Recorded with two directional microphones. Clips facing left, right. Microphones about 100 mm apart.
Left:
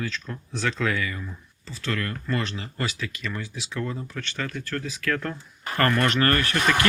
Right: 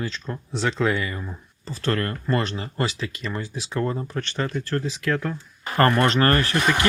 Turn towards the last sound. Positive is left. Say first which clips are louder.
# right 2 dB
turn(degrees=-25)  # may be behind; listen again after turning